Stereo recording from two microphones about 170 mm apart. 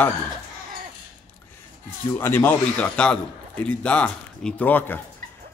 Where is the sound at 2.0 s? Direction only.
15° left (ahead or behind).